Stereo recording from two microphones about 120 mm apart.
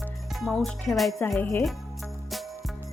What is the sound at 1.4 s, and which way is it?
Speech, 20° left (ahead or behind).